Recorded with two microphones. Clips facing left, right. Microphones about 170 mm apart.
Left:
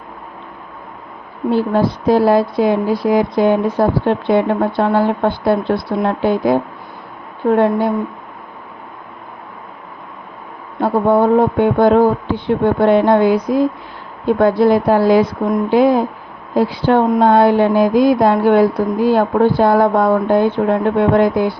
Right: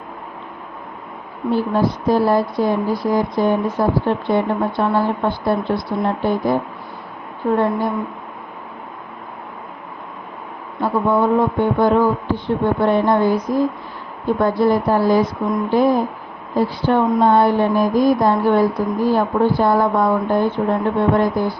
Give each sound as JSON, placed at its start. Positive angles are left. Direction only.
{"t": 1.5, "sound": "speech", "side_deg": 70}
{"t": 10.8, "sound": "speech", "side_deg": 60}